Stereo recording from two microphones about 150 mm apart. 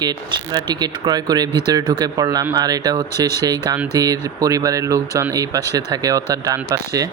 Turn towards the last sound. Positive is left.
turn(degrees=-20)  # may be behind; listen again after turning